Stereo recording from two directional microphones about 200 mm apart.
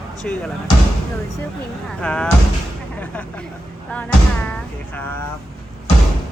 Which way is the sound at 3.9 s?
5° left (ahead or behind).